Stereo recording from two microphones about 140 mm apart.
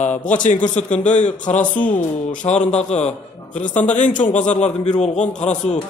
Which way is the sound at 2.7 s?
50° left (ahead or behind).